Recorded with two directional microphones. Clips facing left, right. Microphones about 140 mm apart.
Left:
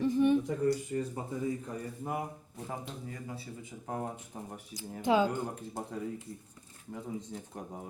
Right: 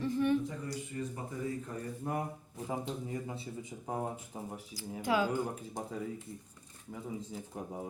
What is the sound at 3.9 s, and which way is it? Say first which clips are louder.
Speech: even; 10° right (ahead or behind).